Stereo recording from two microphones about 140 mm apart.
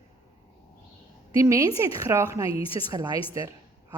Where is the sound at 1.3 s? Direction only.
25° right (ahead or behind).